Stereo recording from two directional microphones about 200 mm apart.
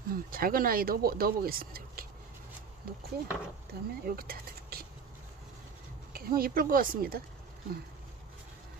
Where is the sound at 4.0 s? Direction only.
50° right (ahead or behind).